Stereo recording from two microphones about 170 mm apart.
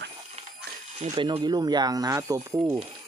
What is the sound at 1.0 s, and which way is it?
Speech, 35° right (ahead or behind).